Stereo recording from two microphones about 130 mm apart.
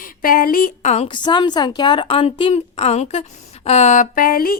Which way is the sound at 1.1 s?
35° left (ahead or behind).